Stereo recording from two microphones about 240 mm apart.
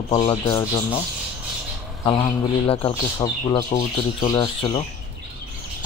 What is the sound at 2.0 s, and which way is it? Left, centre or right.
Speech, left.